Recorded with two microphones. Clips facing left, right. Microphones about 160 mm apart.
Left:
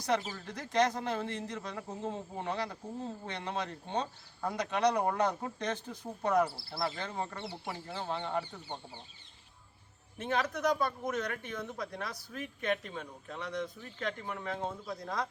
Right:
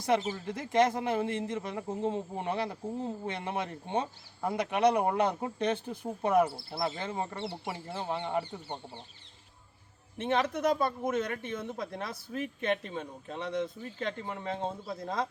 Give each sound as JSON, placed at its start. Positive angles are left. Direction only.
{"t": 0.0, "sound": "a man's voice", "side_deg": -20}
{"t": 10.2, "sound": "a man's voice", "side_deg": -25}